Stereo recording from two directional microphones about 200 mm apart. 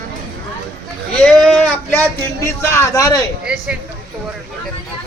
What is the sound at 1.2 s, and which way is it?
Speech, 5° left (ahead or behind).